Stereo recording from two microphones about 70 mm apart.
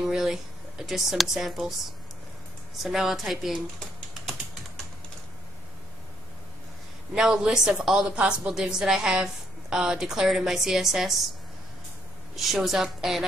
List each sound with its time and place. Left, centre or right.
0.0 s speech: centre
7.2 s a woman's voice: centre
12.4 s speech: centre